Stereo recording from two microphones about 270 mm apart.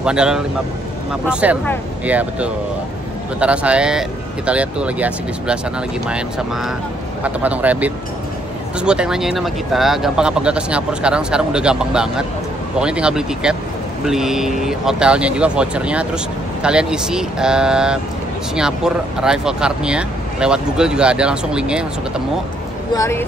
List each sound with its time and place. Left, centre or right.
0.0 s speech: centre
19.2 s speech: centre
22.9 s speech: centre